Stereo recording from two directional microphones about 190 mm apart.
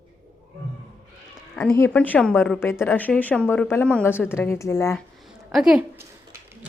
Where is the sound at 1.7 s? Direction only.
10° left (ahead or behind).